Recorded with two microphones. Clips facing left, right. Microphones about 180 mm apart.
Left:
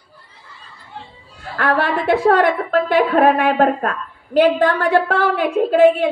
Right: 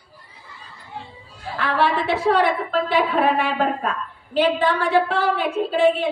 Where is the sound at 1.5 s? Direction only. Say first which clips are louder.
Left 3 dB; 50° left (ahead or behind).